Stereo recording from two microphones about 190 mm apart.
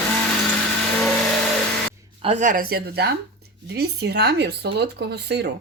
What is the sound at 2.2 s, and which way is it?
Speech, 40° right (ahead or behind).